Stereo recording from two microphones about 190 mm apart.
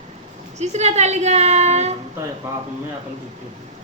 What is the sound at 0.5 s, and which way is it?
Speech, 35° right (ahead or behind).